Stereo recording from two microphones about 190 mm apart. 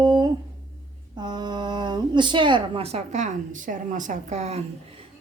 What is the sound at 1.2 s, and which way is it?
A woman's voice, 20° right (ahead or behind).